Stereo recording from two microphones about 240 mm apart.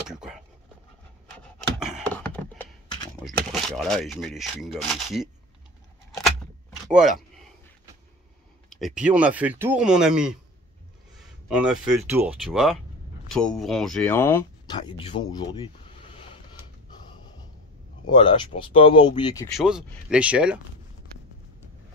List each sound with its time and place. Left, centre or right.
0.1 s speech: centre
1.6 s a sound: centre
3.2 s speech: centre
6.9 s speech: centre
8.6 s speech: centre; by 15.7 s left
18.1 s speech: centre
19.5 s speech: centre